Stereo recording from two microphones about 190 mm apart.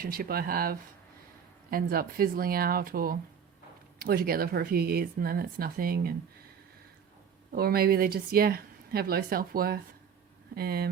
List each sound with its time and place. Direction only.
0.0 s speech: 50° right (ahead or behind)
7.5 s speech: 55° right (ahead or behind)